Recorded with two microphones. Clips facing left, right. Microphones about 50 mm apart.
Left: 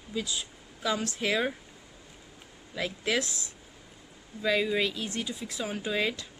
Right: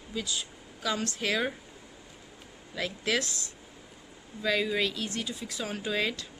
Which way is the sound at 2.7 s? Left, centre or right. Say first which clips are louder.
Even; left.